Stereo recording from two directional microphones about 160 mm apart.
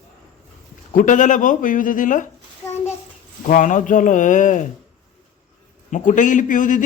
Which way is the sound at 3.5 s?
50° left (ahead or behind).